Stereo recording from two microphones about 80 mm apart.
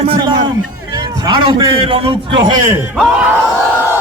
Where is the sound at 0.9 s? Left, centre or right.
Right.